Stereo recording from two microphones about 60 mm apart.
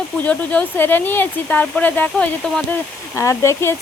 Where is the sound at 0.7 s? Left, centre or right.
Left.